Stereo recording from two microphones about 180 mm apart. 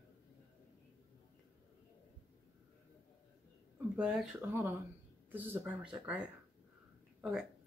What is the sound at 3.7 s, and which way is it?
Speech, 5° right (ahead or behind).